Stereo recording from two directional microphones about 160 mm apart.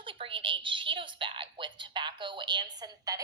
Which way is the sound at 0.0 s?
35° right (ahead or behind).